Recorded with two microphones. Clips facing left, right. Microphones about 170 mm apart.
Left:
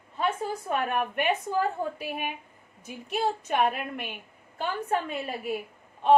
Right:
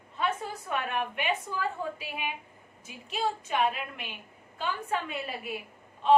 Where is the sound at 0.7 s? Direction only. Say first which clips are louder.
Left 3 dB; 45° left (ahead or behind).